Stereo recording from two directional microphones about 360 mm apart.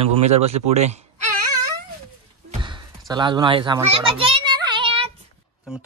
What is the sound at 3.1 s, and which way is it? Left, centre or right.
A child's voice, centre.